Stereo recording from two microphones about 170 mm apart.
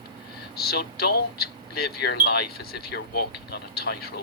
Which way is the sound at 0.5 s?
65° left (ahead or behind).